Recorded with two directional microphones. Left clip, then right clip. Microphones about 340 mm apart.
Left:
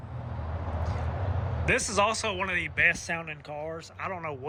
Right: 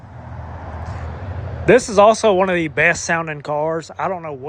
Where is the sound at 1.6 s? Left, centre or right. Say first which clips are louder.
Right 14 dB; centre.